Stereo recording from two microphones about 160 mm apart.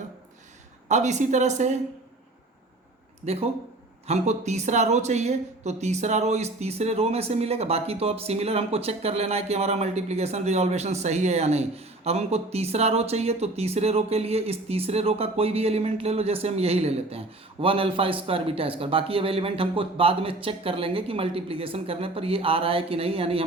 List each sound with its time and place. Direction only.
0.9 s speech: 45° right (ahead or behind)
3.2 s speech: 40° right (ahead or behind)